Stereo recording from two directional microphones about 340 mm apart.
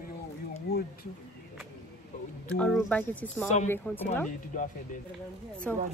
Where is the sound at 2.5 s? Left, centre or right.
Centre.